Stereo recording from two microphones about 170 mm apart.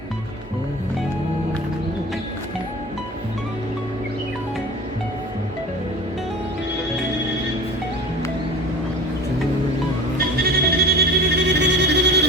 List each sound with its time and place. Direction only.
10.3 s music: 65° right (ahead or behind)